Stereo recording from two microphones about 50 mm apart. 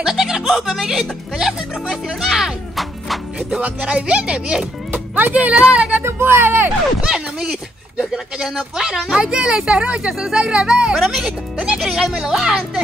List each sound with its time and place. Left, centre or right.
0.0 s speech: centre
3.6 s speech: right
4.9 s speech: right
6.0 s speech: right
7.1 s speech: centre
11.1 s speech: centre
11.6 s speech: centre